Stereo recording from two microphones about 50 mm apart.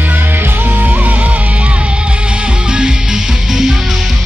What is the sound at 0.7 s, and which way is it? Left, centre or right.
Music, right.